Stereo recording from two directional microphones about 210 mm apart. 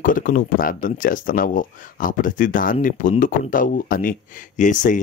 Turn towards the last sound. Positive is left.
turn(degrees=35)  # may be behind; listen again after turning